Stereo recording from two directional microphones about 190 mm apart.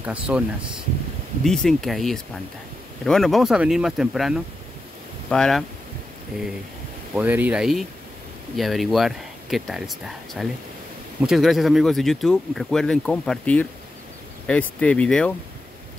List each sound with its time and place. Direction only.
0.0 s speech: 5° right (ahead or behind)
1.4 s speech: 5° left (ahead or behind)
7.2 s speech: 10° right (ahead or behind)